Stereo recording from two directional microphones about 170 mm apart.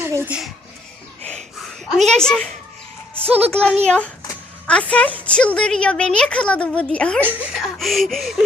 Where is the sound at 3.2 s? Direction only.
35° right (ahead or behind).